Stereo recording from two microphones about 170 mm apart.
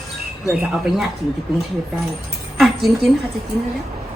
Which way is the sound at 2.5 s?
Centre (ahead or behind).